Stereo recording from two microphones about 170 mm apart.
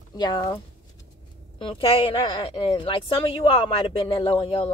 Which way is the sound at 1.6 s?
30° left (ahead or behind).